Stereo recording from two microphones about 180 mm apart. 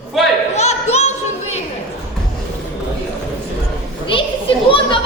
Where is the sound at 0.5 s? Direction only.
40° left (ahead or behind).